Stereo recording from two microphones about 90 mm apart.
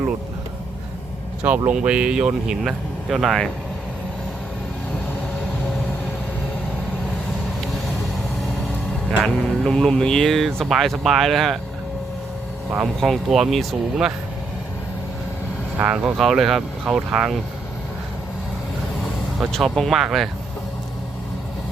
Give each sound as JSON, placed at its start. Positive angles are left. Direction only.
{"t": 1.5, "sound": "speech", "side_deg": -20}
{"t": 9.2, "sound": "speech", "side_deg": 5}
{"t": 12.8, "sound": "speech", "side_deg": 0}
{"t": 15.8, "sound": "speech", "side_deg": -15}
{"t": 16.1, "sound": "speech", "side_deg": 0}
{"t": 19.5, "sound": "speech", "side_deg": 5}